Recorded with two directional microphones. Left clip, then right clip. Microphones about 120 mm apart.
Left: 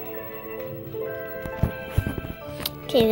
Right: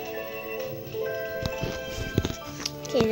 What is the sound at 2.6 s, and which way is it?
Music, 15° left (ahead or behind).